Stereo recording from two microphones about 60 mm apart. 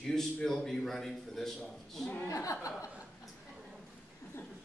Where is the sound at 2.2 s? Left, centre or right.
Left.